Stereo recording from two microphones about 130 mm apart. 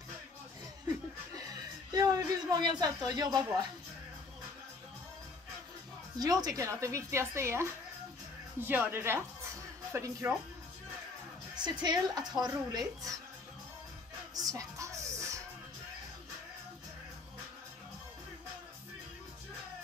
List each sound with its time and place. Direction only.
0.8 s chuckle: 30° right (ahead or behind)
6.1 s a woman's voice: 30° right (ahead or behind)
11.5 s a woman's voice: 35° right (ahead or behind)
14.3 s music: 25° right (ahead or behind)